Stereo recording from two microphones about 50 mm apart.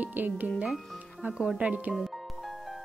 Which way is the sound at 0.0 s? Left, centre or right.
Right.